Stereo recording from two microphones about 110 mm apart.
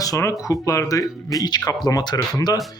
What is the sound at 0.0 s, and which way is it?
Speech, 30° left (ahead or behind).